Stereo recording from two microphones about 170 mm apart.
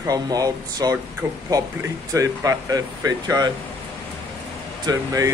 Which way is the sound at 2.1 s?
20° right (ahead or behind).